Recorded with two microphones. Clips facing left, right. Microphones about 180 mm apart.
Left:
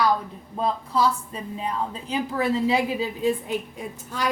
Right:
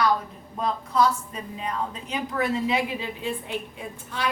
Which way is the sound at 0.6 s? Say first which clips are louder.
Even; 30° left (ahead or behind).